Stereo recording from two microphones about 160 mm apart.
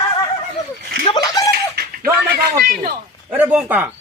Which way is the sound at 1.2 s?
20° left (ahead or behind).